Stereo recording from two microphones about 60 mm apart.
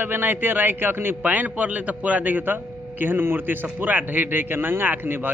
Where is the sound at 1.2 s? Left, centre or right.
Right.